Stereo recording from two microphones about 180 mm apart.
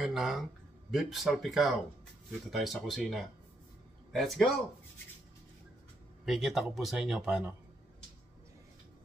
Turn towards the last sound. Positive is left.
turn(degrees=-5)  # may be behind; listen again after turning